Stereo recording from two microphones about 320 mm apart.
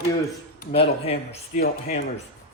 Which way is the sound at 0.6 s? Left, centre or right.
Left.